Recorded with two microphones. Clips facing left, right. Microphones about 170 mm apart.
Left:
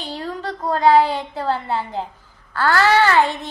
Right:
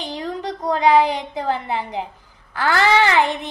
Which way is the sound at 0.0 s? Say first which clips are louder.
Right 1 dB; 15° right (ahead or behind).